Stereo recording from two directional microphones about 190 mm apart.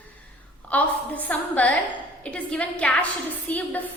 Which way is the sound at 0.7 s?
10° left (ahead or behind).